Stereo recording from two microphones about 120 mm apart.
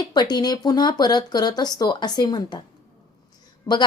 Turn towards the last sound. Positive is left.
turn(degrees=30)  # may be behind; listen again after turning